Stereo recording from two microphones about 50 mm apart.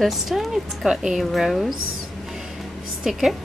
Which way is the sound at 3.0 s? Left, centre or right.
Centre.